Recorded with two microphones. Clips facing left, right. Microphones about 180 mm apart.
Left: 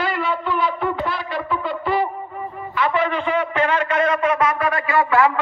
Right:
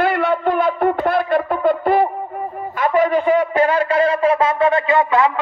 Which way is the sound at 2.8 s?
45° right (ahead or behind).